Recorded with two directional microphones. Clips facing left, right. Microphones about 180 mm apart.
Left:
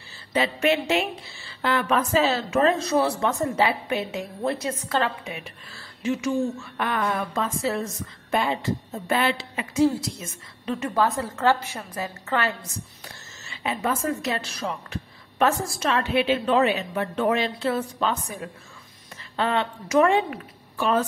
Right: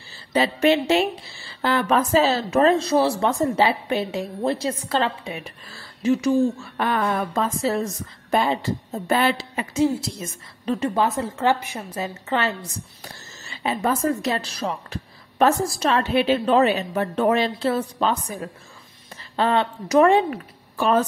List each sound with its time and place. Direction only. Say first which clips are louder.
0.3 s speech: right 4 dB; 35° right (ahead or behind)
6.8 s speech: right 3 dB; 30° right (ahead or behind)
9.8 s a woman's voice: even; 25° right (ahead or behind)
10.6 s a woman's voice: right 5 dB; 35° right (ahead or behind)
11.0 s a woman's voice: right 1 dB; 20° right (ahead or behind)
13.5 s a woman's voice: right 3 dB; 35° right (ahead or behind)